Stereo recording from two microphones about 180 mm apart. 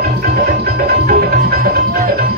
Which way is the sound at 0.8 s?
60° right (ahead or behind).